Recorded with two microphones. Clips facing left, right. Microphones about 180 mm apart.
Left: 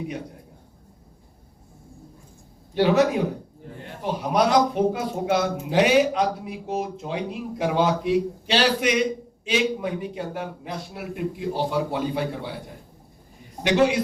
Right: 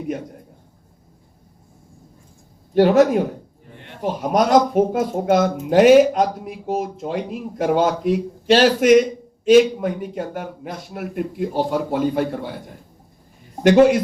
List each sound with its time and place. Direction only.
2.7 s a man's voice: 45° right (ahead or behind)
13.6 s a man's voice: 50° right (ahead or behind)